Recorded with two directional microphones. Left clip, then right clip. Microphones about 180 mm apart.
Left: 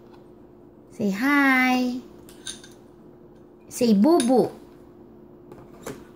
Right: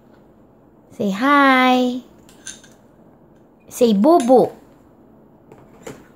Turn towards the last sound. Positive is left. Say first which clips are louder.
# right 7 dB
turn(degrees=-25)  # may be behind; listen again after turning